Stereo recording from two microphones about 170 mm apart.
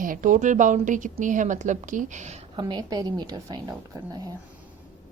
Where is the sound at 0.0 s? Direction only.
50° right (ahead or behind).